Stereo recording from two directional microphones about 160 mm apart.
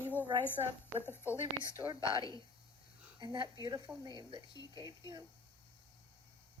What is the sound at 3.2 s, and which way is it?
A woman's voice, 30° right (ahead or behind).